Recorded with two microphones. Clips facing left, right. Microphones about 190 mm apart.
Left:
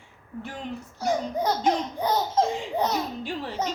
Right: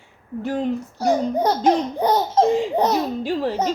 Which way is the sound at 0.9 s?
65° right (ahead or behind).